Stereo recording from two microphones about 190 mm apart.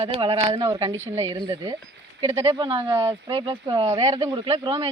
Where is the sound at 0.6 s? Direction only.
15° right (ahead or behind).